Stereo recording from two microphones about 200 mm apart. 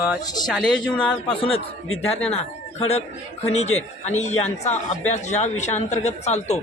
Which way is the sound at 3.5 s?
35° left (ahead or behind).